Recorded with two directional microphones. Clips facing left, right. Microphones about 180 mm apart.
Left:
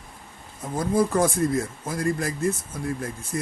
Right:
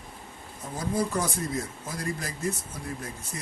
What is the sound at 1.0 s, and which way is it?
Speech, 50° left (ahead or behind).